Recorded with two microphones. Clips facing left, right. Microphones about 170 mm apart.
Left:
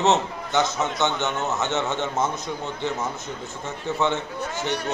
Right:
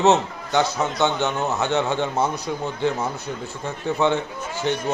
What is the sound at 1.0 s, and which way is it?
A man's voice, 15° right (ahead or behind).